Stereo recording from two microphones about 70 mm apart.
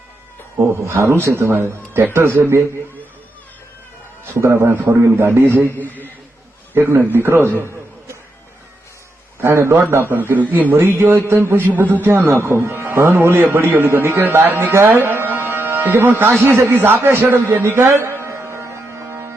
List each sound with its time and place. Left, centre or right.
0.5 s a man's voice: right
4.4 s a man's voice: right
5.8 s a man's voice: left
6.7 s a man's voice: right
9.4 s a man's voice: right
16.5 s a sound: right